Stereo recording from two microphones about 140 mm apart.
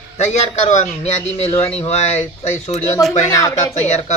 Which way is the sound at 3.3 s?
25° left (ahead or behind).